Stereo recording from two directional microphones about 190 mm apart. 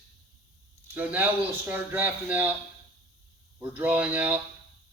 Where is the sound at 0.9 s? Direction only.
10° right (ahead or behind).